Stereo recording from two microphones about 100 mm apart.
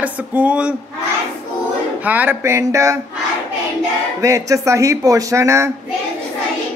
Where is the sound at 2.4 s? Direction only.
30° right (ahead or behind).